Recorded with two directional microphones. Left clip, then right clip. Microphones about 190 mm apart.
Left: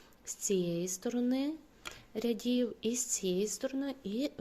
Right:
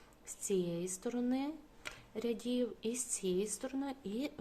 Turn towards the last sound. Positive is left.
turn(degrees=20)  # may be behind; listen again after turning